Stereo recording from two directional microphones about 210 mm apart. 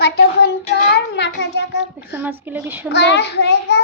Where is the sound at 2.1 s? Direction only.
10° right (ahead or behind).